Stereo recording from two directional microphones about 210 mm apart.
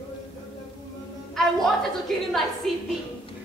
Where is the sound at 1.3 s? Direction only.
Centre (ahead or behind).